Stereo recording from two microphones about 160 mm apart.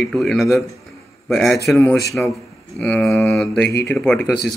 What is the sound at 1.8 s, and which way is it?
Speech, 20° left (ahead or behind).